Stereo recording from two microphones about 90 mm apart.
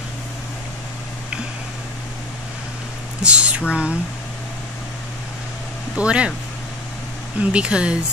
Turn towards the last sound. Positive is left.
turn(degrees=-10)  # may be behind; listen again after turning